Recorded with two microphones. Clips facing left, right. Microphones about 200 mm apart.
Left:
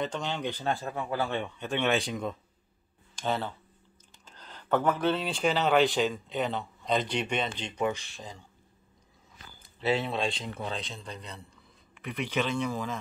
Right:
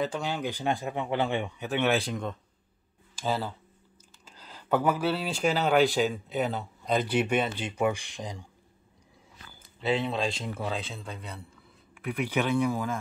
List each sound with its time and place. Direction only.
0.0 s speech: 10° right (ahead or behind)
1.4 s speech: 5° right (ahead or behind)
9.8 s speech: centre (ahead or behind)